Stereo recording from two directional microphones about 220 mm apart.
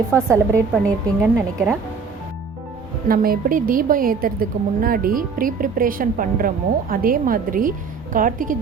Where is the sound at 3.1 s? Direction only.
40° right (ahead or behind).